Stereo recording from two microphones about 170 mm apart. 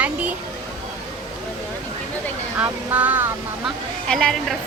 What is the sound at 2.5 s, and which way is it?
Speech, 10° right (ahead or behind).